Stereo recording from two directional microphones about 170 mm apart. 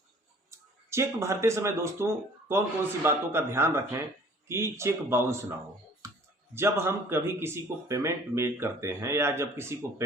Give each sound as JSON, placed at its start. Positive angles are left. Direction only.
{"t": 0.5, "sound": "speech", "side_deg": -15}
{"t": 6.0, "sound": "clicking", "side_deg": -20}
{"t": 6.5, "sound": "speech", "side_deg": -15}